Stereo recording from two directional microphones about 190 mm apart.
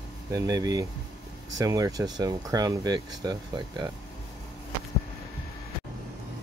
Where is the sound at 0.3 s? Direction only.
20° right (ahead or behind).